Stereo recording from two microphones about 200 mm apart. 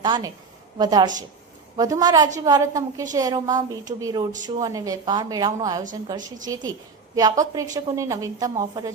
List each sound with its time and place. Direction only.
0.0 s a woman's voice: 20° right (ahead or behind)